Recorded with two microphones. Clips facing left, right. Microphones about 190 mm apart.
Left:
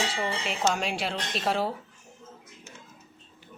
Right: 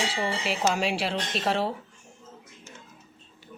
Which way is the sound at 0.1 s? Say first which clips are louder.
Right 1 dB; 25° right (ahead or behind).